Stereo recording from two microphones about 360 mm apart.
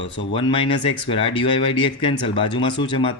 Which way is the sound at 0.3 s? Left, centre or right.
Centre.